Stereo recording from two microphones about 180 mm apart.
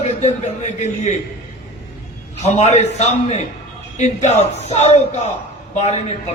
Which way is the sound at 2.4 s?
40° left (ahead or behind).